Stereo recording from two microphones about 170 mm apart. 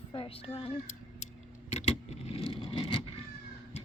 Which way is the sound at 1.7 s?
40° left (ahead or behind).